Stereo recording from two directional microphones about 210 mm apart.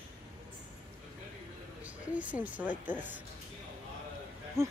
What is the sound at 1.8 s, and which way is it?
Speech, 5° right (ahead or behind).